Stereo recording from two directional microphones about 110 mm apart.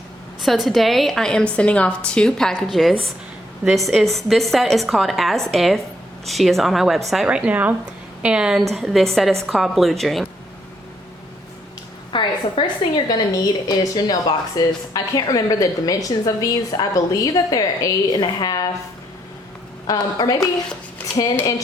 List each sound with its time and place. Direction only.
0.4 s a woman's voice: centre (ahead or behind)
12.1 s a woman's voice: 45° left (ahead or behind)
19.9 s a woman's voice: 35° left (ahead or behind)